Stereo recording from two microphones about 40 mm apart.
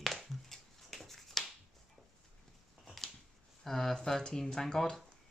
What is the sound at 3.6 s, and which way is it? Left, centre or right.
Speech, centre.